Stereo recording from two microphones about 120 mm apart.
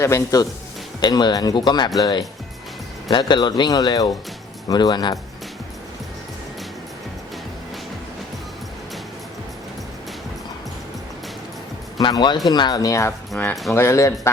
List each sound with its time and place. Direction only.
0.0 s speech: 25° left (ahead or behind)
11.9 s speech: 35° left (ahead or behind)
13.3 s speech: 15° left (ahead or behind)
13.7 s speech: 25° left (ahead or behind)